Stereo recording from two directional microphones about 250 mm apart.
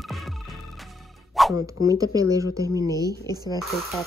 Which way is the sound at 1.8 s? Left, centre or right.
Centre.